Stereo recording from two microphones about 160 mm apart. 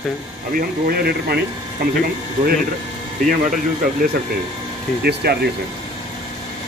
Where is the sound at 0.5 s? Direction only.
75° right (ahead or behind).